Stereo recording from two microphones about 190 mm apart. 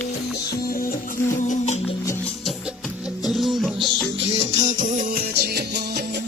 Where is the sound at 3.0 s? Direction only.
Centre (ahead or behind).